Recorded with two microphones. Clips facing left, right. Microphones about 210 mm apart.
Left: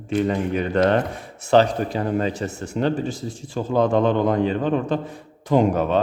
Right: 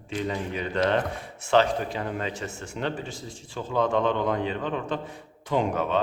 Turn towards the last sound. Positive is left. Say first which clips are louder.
# left 7 dB
turn(degrees=40)  # may be behind; listen again after turning